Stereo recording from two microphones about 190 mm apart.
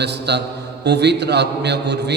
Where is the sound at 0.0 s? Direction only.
60° right (ahead or behind).